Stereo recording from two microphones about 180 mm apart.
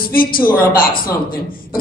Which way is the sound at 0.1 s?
50° left (ahead or behind).